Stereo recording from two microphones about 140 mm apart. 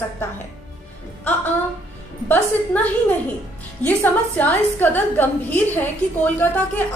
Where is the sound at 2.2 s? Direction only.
15° left (ahead or behind).